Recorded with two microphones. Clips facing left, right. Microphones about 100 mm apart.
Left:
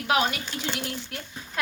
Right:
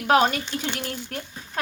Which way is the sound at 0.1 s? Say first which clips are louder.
Right 6 dB; 45° right (ahead or behind).